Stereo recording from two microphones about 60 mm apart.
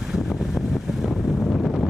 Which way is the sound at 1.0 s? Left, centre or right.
Centre.